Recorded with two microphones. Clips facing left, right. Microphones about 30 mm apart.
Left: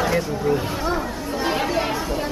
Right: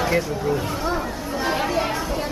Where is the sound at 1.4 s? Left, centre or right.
Centre.